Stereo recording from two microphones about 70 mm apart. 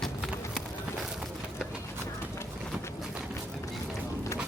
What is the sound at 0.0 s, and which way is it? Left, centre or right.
Run, centre.